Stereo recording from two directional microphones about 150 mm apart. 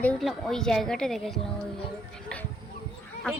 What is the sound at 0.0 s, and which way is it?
A woman's voice, 5° left (ahead or behind).